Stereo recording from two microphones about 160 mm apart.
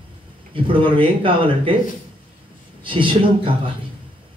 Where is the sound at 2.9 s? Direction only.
30° right (ahead or behind).